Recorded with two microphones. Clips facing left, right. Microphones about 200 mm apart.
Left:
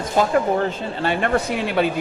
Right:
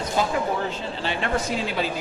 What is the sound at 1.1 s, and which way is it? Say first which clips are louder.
Speech: left 5 dB; 55° left (ahead or behind).